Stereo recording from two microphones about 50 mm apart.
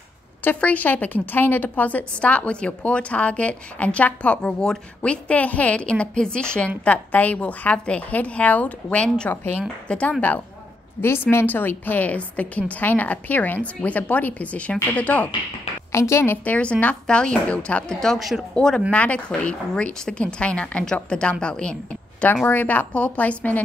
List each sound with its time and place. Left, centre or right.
0.6 s a woman's voice: left
4.4 s a woman's voice: centre
6.8 s a woman's voice: left
9.3 s a woman's voice: left
9.6 s a woman's voice: left
11.0 s a woman's voice: left
11.4 s a woman's voice: left
15.9 s a woman's voice: left
16.4 s a woman's voice: left
18.0 s a woman's voice: centre
18.5 s speech: centre
18.9 s a woman's voice: left
22.5 s a woman's voice: left